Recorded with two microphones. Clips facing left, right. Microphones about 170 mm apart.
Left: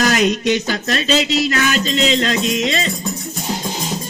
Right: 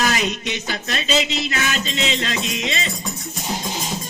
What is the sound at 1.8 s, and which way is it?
Music, 40° left (ahead or behind).